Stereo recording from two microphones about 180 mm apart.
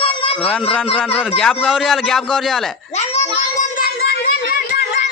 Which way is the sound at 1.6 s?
Centre (ahead or behind).